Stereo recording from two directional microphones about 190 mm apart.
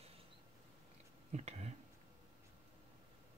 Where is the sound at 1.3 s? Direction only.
35° right (ahead or behind).